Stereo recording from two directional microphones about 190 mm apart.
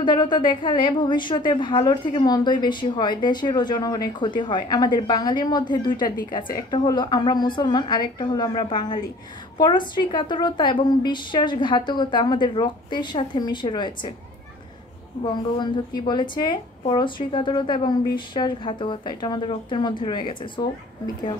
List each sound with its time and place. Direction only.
0.0 s a woman's voice: 25° left (ahead or behind)
16.1 s a woman's voice: 25° left (ahead or behind)